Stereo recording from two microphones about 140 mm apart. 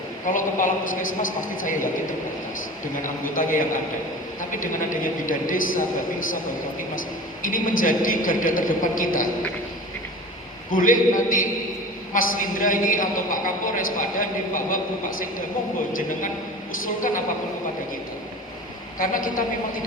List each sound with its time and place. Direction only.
0.3 s a man's voice: 70° left (ahead or behind)
3.3 s a man's voice: 70° left (ahead or behind)
4.6 s a man's voice: 70° left (ahead or behind)
7.4 s a man's voice: 75° left (ahead or behind)
10.7 s a man's voice: 75° left (ahead or behind)
15.9 s a man's voice: 75° left (ahead or behind)
18.9 s a man's voice: 75° left (ahead or behind)